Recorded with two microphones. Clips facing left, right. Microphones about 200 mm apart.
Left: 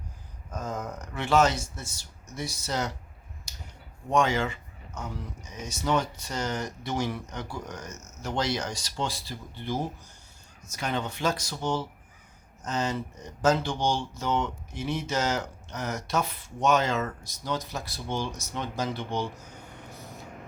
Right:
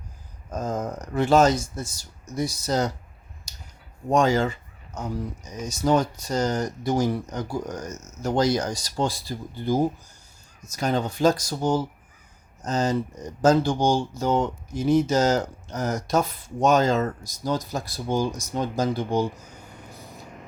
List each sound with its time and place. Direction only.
0.5 s speech: 40° right (ahead or behind)
4.1 s speech: 40° right (ahead or behind)
19.9 s vehicle: 15° right (ahead or behind)